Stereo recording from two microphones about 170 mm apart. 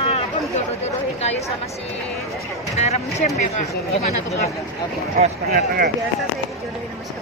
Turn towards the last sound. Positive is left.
turn(degrees=-60)  # may be behind; listen again after turning